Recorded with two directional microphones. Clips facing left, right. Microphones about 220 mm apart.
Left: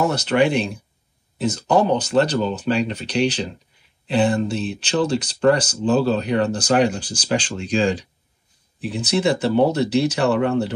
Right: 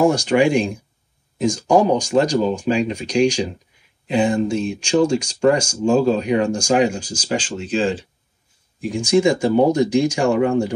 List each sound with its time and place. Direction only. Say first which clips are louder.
0.0 s speech: right 3 dB; 10° right (ahead or behind)
9.2 s speech: even; 10° right (ahead or behind)